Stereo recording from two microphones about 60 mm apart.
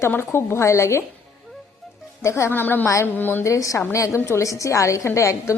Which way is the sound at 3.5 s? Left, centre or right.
Left.